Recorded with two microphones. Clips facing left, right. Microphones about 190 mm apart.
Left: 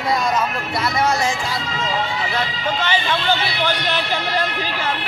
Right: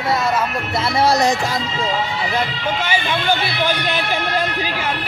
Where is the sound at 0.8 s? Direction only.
30° right (ahead or behind).